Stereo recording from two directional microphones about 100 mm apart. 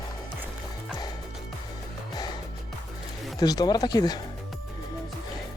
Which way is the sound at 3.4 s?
40° left (ahead or behind).